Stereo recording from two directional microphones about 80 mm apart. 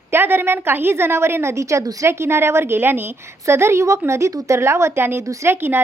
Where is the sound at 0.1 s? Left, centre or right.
Right.